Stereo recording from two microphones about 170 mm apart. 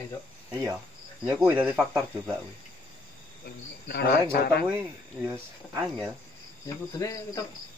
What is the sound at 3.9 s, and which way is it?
Speech, 70° left (ahead or behind).